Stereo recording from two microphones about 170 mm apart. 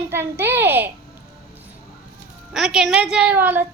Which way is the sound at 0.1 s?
15° right (ahead or behind).